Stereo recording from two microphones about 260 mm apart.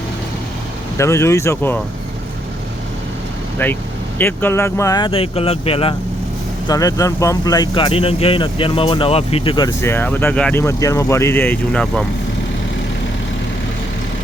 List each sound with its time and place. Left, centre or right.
0.9 s speech: centre
3.6 s speech: centre